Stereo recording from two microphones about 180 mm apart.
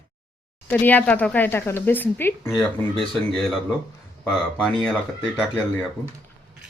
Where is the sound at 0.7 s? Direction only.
10° left (ahead or behind).